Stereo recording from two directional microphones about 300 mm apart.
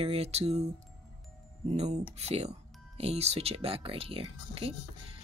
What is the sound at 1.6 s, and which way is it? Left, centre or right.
Speech, right.